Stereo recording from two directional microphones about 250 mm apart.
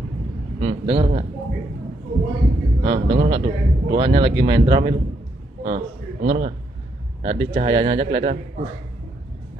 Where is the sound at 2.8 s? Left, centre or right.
Right.